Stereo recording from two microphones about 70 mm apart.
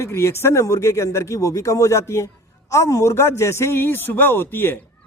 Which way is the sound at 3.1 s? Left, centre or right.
Left.